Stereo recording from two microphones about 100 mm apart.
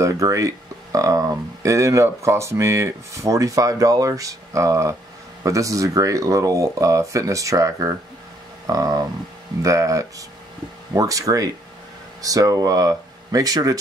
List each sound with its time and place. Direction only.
0.0 s speech: 30° right (ahead or behind)